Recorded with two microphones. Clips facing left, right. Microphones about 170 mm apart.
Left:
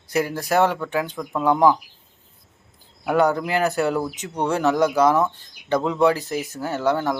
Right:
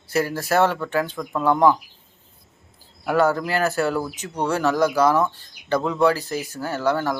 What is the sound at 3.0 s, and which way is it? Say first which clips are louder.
Speech: even; 15° left (ahead or behind).